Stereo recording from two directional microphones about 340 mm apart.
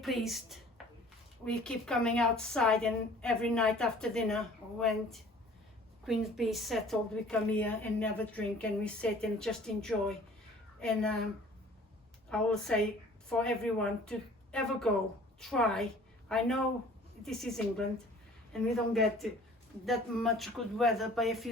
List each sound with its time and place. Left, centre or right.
0.0 s a woman's voice: centre
12.3 s a woman's voice: centre